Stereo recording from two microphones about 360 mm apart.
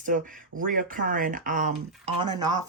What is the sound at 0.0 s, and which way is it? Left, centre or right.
Speech, right.